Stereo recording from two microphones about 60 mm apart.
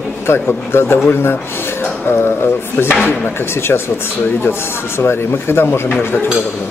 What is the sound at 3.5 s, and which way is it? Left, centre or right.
Speech, left.